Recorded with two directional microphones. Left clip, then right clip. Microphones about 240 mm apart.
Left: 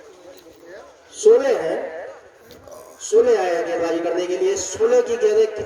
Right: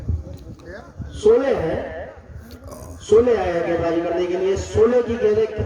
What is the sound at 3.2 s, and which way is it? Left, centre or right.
A man's voice, left.